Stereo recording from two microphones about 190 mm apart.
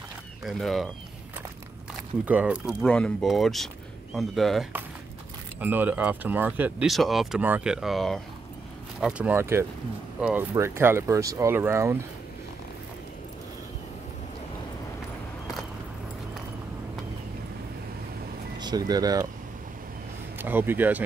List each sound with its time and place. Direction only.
0.4 s speech: centre (ahead or behind)
2.2 s speech: 5° right (ahead or behind)
18.6 s speech: 20° right (ahead or behind)
20.3 s speech: 10° right (ahead or behind)